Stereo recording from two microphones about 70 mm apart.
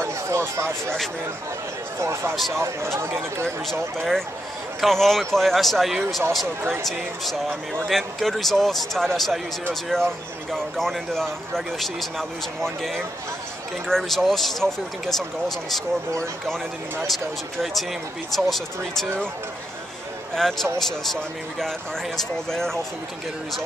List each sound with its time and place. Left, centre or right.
0.0 s speech: right
2.0 s speech: right
2.3 s speech: centre
2.6 s speech: right
4.7 s speech: centre
17.0 s speech: centre
20.4 s speech: centre